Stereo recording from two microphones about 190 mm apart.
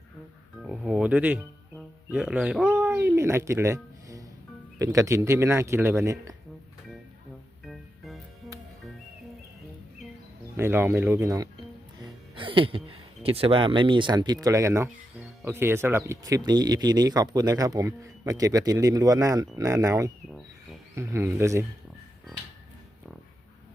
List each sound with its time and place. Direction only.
0.6 s music: centre (ahead or behind)
2.0 s a sound: 5° right (ahead or behind)
4.8 s speech: 15° right (ahead or behind)
7.6 s music: centre (ahead or behind)
10.6 s speech: 10° right (ahead or behind)
12.3 s a sound: 25° right (ahead or behind)
13.2 s speech: 30° right (ahead or behind); by 21.7 s 15° right (ahead or behind)